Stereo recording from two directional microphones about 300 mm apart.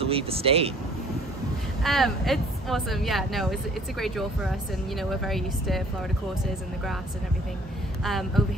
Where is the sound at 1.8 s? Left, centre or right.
Centre.